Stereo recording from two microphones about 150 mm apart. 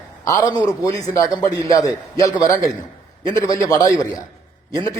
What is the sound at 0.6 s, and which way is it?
A man's voice, 25° left (ahead or behind).